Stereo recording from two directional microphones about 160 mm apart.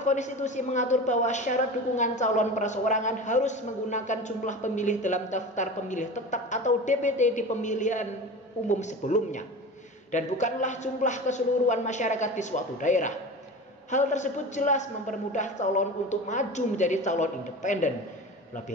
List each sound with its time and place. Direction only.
0.0 s a woman's voice: 50° left (ahead or behind)